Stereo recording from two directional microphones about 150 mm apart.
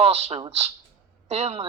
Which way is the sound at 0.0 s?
45° right (ahead or behind).